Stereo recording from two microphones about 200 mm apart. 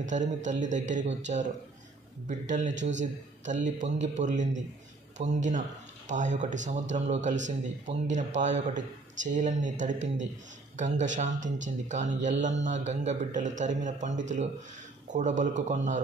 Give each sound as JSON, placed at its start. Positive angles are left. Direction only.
{"t": 0.0, "sound": "a man's voice", "side_deg": -40}